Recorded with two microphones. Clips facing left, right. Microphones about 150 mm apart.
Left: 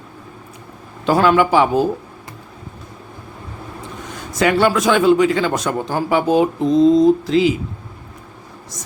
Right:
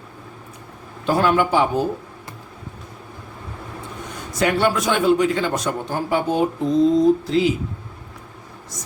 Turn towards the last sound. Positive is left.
turn(degrees=90)